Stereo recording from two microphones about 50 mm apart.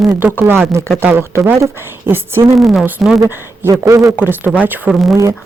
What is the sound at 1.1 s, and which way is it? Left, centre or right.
Speech, right.